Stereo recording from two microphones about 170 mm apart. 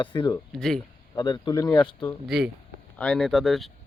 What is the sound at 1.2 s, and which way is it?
Speech, 25° left (ahead or behind).